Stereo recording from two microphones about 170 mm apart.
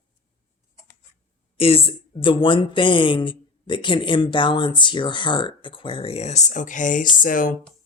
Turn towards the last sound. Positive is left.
turn(degrees=50)  # may be behind; listen again after turning